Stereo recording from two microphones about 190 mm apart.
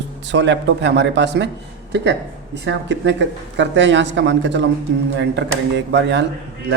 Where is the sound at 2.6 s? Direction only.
70° right (ahead or behind).